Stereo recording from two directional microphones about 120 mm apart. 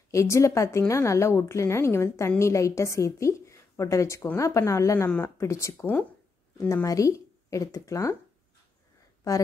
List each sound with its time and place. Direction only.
0.1 s a woman's voice: 25° left (ahead or behind)